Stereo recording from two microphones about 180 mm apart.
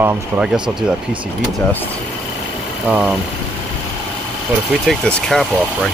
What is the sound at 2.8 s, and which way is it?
Speech, 5° right (ahead or behind).